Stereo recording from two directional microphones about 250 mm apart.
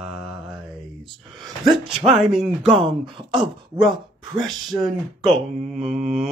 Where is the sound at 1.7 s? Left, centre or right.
Right.